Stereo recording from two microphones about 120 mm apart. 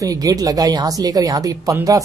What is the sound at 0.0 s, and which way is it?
Speech, 30° right (ahead or behind).